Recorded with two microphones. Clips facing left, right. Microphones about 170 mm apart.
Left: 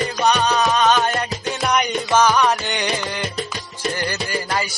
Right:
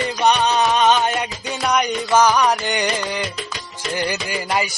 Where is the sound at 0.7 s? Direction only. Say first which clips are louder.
Right 1 dB; 20° right (ahead or behind).